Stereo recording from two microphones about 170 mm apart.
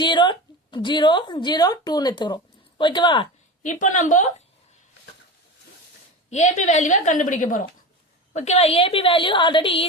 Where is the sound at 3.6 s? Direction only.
50° left (ahead or behind).